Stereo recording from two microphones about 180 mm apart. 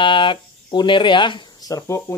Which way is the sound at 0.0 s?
25° left (ahead or behind).